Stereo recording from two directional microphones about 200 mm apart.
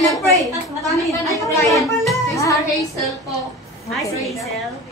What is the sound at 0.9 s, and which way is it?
Speech, 15° left (ahead or behind).